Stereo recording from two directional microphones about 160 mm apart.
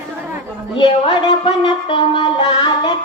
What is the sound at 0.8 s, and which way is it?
Music, 30° left (ahead or behind).